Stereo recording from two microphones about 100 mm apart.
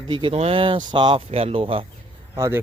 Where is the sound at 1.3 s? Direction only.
80° right; by 1.9 s 65° right (ahead or behind).